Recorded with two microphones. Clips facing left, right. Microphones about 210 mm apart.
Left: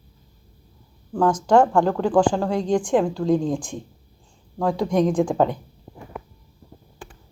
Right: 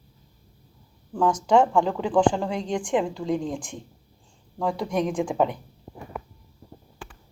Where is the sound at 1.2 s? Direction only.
75° left (ahead or behind).